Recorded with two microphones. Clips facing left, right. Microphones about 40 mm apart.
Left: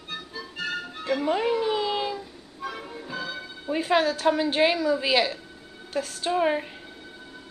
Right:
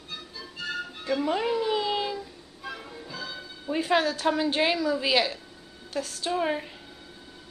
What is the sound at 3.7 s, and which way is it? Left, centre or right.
A woman's voice, centre.